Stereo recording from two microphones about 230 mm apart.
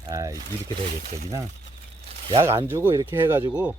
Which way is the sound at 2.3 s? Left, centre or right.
Centre.